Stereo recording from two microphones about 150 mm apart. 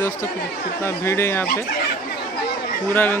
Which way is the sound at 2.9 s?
15° left (ahead or behind).